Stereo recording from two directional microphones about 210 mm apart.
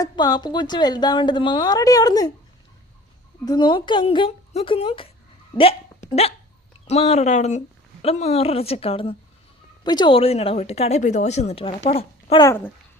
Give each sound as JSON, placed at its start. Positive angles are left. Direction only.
{"t": 0.0, "sound": "a woman's voice", "side_deg": 20}
{"t": 3.4, "sound": "a woman's voice", "side_deg": 20}
{"t": 12.5, "sound": "a child's voice", "side_deg": 10}